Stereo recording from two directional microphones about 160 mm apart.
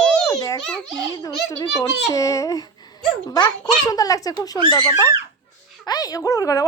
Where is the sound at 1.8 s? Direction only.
20° left (ahead or behind).